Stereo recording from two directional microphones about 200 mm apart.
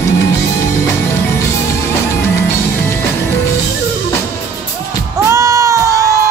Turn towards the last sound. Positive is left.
turn(degrees=-15)  # may be behind; listen again after turning